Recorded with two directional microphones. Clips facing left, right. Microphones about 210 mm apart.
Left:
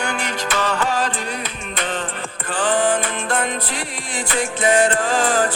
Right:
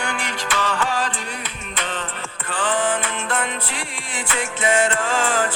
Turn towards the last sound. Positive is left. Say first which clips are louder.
# left 3 dB
turn(degrees=35)  # may be behind; listen again after turning